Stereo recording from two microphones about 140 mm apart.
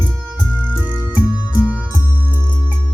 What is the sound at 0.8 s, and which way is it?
Music, 10° right (ahead or behind).